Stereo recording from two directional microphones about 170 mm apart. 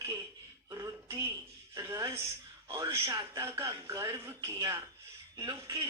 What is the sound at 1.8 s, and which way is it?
Speech, 20° right (ahead or behind).